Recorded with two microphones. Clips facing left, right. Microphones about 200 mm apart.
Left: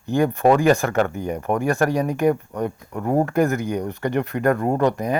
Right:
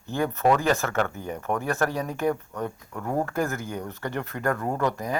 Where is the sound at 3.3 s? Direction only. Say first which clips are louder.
Left 8 dB; 15° left (ahead or behind).